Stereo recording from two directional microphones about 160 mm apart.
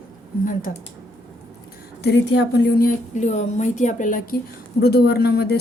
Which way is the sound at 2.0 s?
90° left.